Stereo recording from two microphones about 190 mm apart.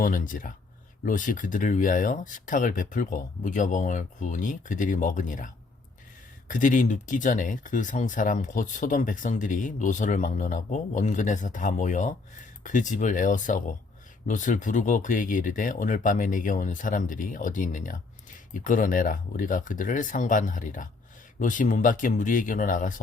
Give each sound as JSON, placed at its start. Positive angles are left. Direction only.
{"t": 0.0, "sound": "speech", "side_deg": 45}
{"t": 6.5, "sound": "speech", "side_deg": 45}